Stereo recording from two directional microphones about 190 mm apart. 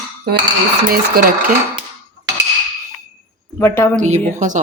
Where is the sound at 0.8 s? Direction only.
50° right (ahead or behind).